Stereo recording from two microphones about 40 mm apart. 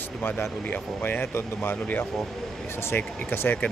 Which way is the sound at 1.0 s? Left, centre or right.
Left.